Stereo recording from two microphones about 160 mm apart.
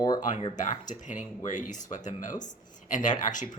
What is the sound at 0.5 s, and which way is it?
Speech, 50° left (ahead or behind).